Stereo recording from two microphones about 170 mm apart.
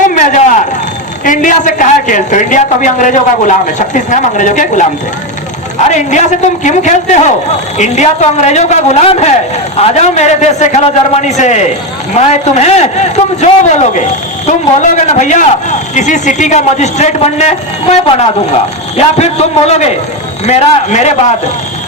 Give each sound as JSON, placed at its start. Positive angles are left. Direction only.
{"t": 0.1, "sound": "a sound", "side_deg": 50}
{"t": 1.2, "sound": "a woman's voice", "side_deg": 50}
{"t": 5.9, "sound": "a woman's voice", "side_deg": 45}